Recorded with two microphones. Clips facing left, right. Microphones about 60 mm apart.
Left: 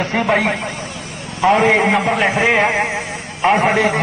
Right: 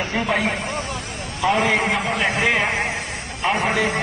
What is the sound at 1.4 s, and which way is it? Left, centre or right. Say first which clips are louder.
Speech: left 6 dB; left.